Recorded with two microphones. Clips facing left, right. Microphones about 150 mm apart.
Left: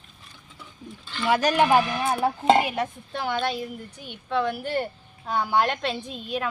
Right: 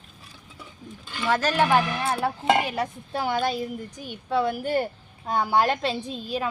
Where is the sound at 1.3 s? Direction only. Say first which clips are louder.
Left 2 dB; 15° left (ahead or behind).